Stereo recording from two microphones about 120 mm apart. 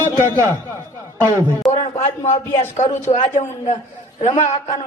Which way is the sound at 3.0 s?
80° left.